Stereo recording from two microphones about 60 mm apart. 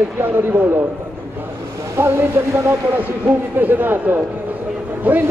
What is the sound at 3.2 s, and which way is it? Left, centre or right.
Speech, right.